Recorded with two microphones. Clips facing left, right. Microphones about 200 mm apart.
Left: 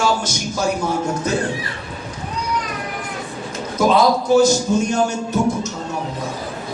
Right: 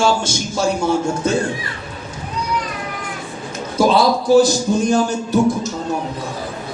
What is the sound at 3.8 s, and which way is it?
Speech, 30° right (ahead or behind).